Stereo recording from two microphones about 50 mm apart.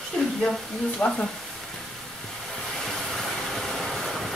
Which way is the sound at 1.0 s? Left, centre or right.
Centre.